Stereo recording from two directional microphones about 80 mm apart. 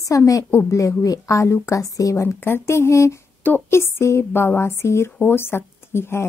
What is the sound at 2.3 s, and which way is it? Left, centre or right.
A woman's voice, left.